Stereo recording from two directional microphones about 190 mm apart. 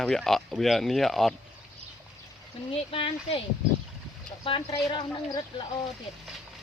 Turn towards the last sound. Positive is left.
turn(degrees=25)  # may be behind; listen again after turning